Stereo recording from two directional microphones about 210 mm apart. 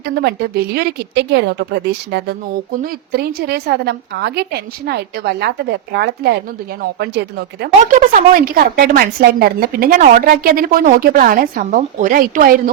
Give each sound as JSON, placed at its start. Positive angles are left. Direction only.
{"t": 0.0, "sound": "speech", "side_deg": -50}